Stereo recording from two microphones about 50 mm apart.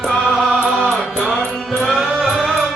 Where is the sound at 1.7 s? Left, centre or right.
Centre.